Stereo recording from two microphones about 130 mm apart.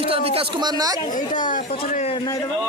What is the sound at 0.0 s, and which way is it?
Speech, 45° right (ahead or behind).